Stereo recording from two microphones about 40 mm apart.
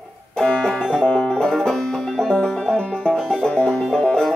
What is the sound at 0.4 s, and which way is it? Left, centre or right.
Music, centre.